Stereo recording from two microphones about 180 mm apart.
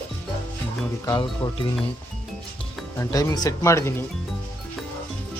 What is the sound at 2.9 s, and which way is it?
Speech, 15° left (ahead or behind).